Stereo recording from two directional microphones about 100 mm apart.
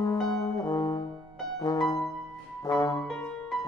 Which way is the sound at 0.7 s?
40° left (ahead or behind).